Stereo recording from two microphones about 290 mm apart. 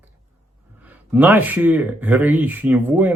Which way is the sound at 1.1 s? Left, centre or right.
Centre.